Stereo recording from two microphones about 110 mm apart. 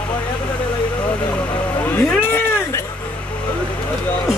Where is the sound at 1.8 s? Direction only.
15° left (ahead or behind).